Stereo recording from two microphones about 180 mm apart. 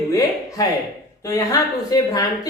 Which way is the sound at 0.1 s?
20° left (ahead or behind).